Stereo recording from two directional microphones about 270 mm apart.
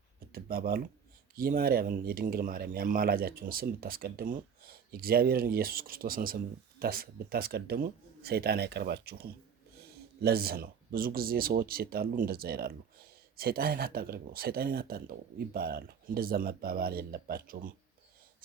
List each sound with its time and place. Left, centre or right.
0.3 s speech: right